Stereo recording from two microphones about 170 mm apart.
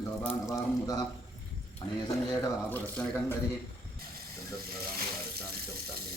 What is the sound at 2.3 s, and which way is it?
Speech, 10° left (ahead or behind).